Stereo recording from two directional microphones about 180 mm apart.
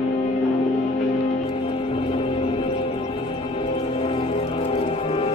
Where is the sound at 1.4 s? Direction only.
30° left (ahead or behind).